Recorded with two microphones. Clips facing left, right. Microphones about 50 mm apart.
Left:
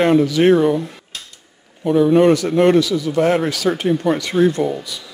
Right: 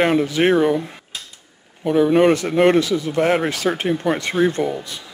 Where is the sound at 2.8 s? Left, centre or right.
Right.